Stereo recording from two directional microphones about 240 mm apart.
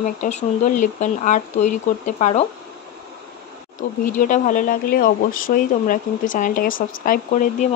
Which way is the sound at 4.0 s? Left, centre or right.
Left.